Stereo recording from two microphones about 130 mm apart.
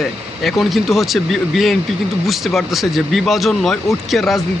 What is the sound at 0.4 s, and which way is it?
Speech, centre (ahead or behind).